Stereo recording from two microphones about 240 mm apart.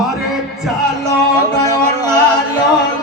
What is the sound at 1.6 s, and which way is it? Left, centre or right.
Music, centre.